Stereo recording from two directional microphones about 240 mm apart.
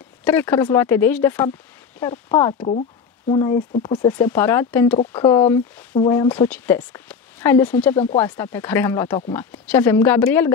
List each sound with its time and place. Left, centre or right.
0.2 s speech: centre
4.1 s speech: centre
4.9 s speech: left